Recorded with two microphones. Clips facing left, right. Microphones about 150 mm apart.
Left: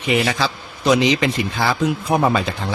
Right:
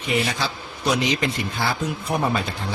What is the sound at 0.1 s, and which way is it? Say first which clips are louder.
Speech: left 5 dB; 90° left.